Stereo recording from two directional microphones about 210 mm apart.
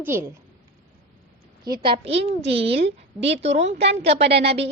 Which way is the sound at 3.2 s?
30° right (ahead or behind).